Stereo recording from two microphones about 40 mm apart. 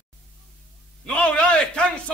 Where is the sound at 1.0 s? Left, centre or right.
Left.